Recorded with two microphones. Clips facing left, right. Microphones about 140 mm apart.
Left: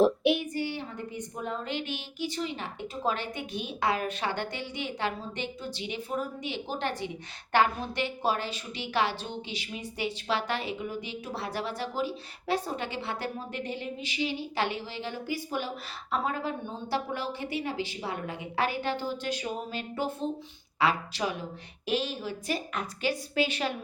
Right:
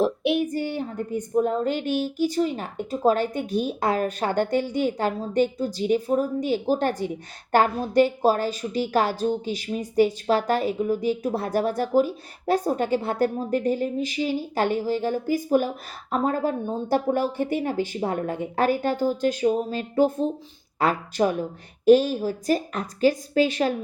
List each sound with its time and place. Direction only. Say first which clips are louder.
0.0 s child singing: right 1 dB; centre (ahead or behind)
0.5 s a woman's voice: right 6 dB; 45° right (ahead or behind)